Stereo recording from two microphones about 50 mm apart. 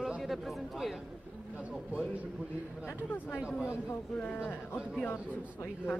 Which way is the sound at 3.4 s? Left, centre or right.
Centre.